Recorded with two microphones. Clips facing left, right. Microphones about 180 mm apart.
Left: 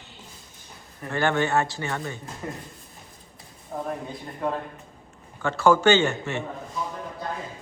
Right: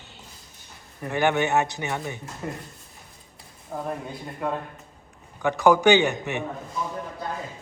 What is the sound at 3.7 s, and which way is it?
Speech, centre (ahead or behind).